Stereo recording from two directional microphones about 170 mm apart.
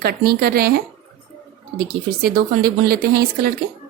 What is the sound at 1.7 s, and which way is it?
Speech, 65° right (ahead or behind).